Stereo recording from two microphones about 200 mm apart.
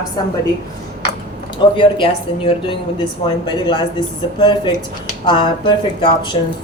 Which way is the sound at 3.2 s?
25° left (ahead or behind).